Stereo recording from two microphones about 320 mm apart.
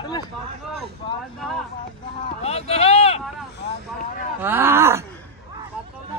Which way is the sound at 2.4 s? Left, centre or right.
Centre.